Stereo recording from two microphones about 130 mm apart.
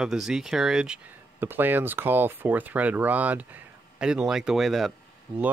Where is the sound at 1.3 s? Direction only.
15° right (ahead or behind); by 4.9 s centre (ahead or behind).